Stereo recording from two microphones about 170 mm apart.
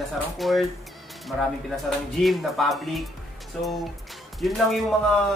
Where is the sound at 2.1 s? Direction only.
Centre (ahead or behind).